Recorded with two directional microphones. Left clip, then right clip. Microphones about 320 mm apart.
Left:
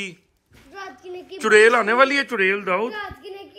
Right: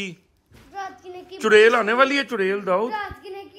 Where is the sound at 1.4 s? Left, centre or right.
Centre.